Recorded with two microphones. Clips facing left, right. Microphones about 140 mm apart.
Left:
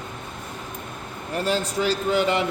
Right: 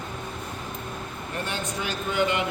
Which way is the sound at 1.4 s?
35° left (ahead or behind).